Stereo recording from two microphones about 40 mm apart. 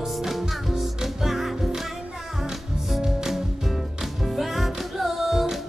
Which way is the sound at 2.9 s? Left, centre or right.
Centre.